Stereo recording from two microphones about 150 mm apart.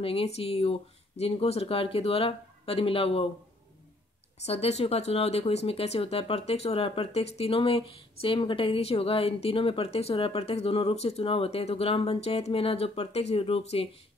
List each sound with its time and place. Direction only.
0.0 s speech: 40° left (ahead or behind)
4.4 s speech: 45° left (ahead or behind)